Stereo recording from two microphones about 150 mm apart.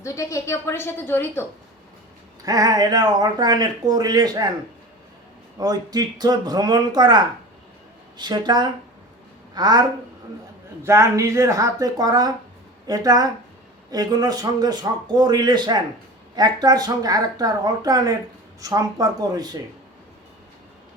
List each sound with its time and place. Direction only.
0.0 s a woman's voice: 20° left (ahead or behind)
2.4 s speech: 25° right (ahead or behind)
5.5 s speech: 25° right (ahead or behind)
8.2 s speech: 30° right (ahead or behind)
10.8 s speech: 20° right (ahead or behind)